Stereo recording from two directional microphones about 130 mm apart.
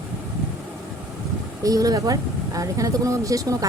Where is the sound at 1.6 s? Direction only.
25° right (ahead or behind).